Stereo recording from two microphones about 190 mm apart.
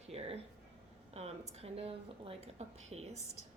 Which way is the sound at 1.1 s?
30° right (ahead or behind).